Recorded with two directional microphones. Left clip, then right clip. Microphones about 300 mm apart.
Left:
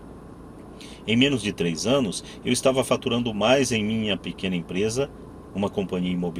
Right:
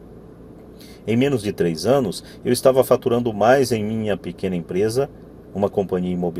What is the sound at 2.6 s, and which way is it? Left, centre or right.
Speech, right.